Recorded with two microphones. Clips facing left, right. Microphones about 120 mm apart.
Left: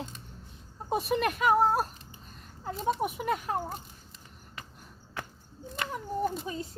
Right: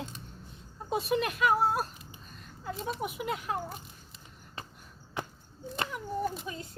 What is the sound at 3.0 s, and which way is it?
Speech, 50° left (ahead or behind).